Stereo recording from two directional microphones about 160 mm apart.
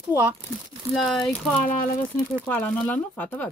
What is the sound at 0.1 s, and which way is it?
Speech, 15° right (ahead or behind).